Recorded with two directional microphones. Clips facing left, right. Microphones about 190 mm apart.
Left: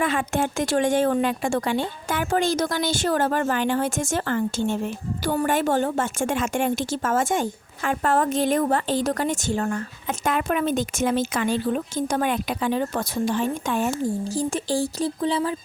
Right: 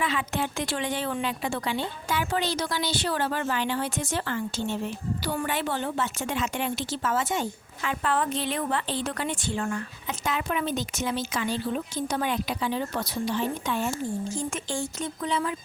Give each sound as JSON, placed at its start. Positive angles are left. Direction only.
{"t": 0.0, "sound": "a woman's voice", "side_deg": 45}
{"t": 14.3, "sound": "speech", "side_deg": 35}